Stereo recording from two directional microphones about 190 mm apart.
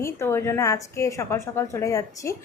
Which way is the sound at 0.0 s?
15° left (ahead or behind).